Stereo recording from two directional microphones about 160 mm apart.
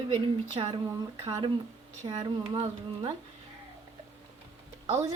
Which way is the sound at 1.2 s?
20° right (ahead or behind).